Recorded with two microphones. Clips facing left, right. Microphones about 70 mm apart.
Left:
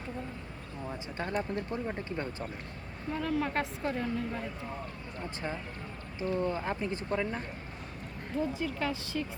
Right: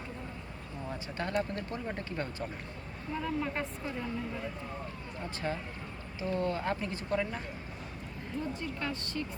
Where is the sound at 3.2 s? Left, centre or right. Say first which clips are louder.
Left 4 dB; left.